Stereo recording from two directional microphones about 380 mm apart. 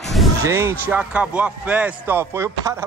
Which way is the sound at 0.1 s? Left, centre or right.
Centre.